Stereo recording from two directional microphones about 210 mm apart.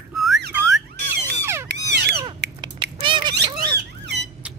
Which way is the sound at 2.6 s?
20° right (ahead or behind).